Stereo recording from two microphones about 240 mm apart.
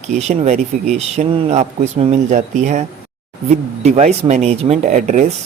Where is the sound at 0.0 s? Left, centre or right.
Right.